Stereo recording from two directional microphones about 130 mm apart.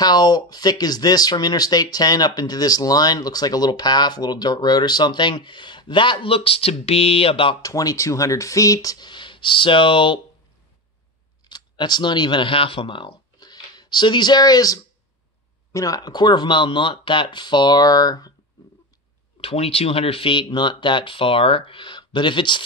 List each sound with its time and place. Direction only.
0.0 s speech: 30° left (ahead or behind)
7.6 s speech: 25° left (ahead or behind)
11.4 s speech: 35° left (ahead or behind)
19.4 s speech: 50° left (ahead or behind)